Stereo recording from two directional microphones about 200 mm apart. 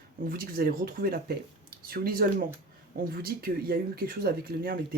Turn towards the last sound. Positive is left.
turn(degrees=-50)  # may be behind; listen again after turning